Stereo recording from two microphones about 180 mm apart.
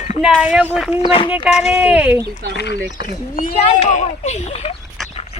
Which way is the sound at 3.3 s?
45° left (ahead or behind).